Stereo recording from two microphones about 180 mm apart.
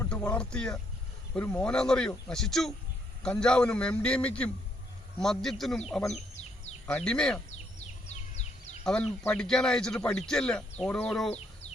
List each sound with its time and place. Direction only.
0.0 s speech: 10° left (ahead or behind)
8.0 s bird: 40° left (ahead or behind)
8.8 s speech: 5° left (ahead or behind)